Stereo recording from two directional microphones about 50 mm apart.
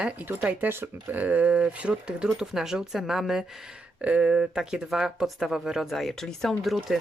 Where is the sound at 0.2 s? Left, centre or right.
Right; by 3.4 s centre.